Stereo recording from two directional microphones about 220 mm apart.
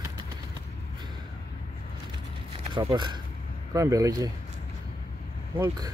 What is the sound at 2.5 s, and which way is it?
Speech, 25° right (ahead or behind).